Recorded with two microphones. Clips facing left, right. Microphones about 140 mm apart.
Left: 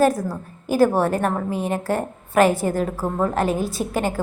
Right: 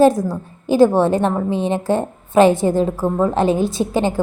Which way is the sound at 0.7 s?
25° right (ahead or behind).